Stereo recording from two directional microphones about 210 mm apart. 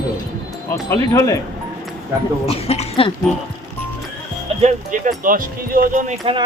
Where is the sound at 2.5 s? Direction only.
30° left (ahead or behind).